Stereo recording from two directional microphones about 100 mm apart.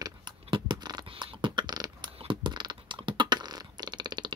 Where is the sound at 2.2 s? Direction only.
55° right (ahead or behind).